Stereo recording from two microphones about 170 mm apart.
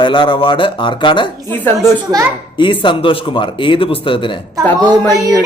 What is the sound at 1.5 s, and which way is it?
Speech, 10° left (ahead or behind).